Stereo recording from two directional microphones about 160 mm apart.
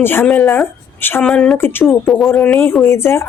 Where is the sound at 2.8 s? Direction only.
15° left (ahead or behind).